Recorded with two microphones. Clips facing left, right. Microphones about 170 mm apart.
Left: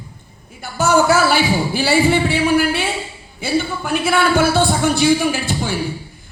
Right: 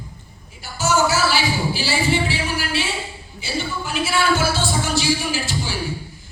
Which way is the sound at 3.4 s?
55° left (ahead or behind).